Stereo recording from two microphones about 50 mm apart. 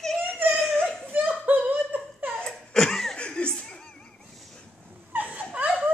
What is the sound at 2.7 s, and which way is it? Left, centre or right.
Laughter, centre.